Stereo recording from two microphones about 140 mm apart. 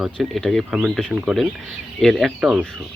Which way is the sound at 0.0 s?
Centre (ahead or behind).